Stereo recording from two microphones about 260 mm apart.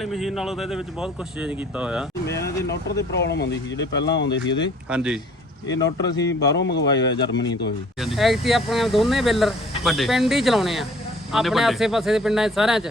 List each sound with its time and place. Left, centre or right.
0.0 s speech: centre
2.4 s speech: left
4.3 s speech: centre
4.9 s speech: centre
5.6 s speech: left
6.9 s speech: centre
8.0 s speech: centre